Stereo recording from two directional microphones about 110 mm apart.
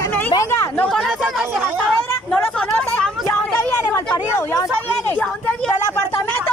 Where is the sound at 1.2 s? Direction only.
10° right (ahead or behind).